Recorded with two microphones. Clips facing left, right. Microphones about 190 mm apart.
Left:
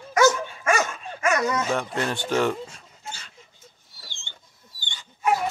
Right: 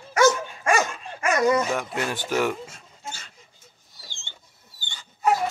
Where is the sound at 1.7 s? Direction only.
10° right (ahead or behind).